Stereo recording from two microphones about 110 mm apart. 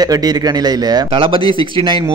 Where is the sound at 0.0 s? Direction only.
35° right (ahead or behind).